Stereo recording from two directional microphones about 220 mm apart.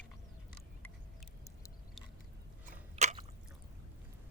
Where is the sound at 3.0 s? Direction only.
30° right (ahead or behind).